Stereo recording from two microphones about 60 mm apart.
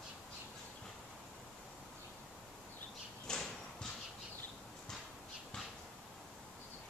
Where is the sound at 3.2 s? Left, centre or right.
Centre.